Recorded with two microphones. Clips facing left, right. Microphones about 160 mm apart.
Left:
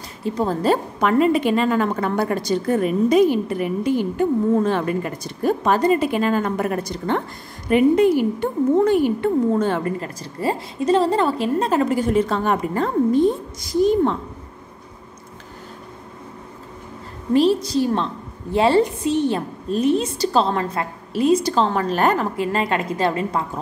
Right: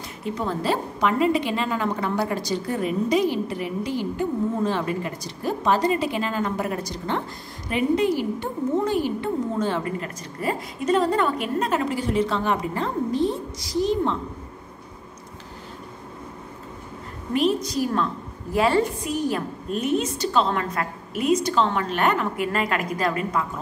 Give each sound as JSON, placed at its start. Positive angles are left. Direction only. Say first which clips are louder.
{"t": 0.2, "sound": "a woman's voice", "louder": "left 6 dB", "side_deg": 35}
{"t": 9.9, "sound": "a woman's voice", "louder": "left 3 dB", "side_deg": 30}
{"t": 11.8, "sound": "a woman's voice", "louder": "left 5 dB", "side_deg": 45}
{"t": 17.3, "sound": "a woman's voice", "louder": "left 6 dB", "side_deg": 30}